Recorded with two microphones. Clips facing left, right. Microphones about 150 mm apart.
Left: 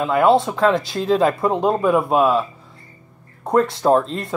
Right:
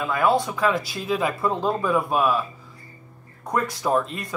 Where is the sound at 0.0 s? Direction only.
25° left (ahead or behind).